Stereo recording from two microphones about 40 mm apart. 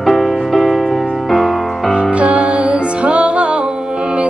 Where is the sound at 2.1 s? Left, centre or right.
Right.